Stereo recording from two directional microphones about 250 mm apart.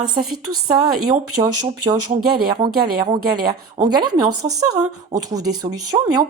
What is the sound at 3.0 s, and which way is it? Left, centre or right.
Speech, centre.